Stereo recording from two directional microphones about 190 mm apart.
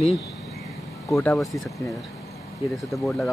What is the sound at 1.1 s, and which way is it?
Speech, centre (ahead or behind).